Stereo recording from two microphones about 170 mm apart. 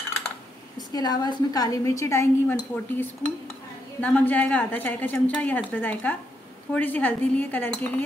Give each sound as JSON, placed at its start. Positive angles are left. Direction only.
{"t": 0.7, "sound": "a woman's voice", "side_deg": 25}